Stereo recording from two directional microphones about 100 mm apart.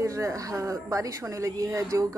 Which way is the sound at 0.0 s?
35° right (ahead or behind).